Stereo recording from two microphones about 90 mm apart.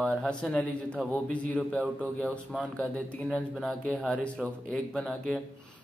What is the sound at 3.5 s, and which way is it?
Speech, 5° left (ahead or behind).